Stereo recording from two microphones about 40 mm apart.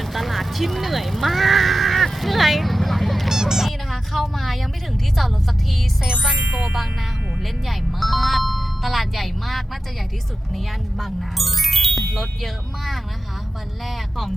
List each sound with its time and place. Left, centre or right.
0.0 s a sound: centre
3.2 s honk: centre
3.7 s music: centre
6.5 s music: right
7.7 s speech: centre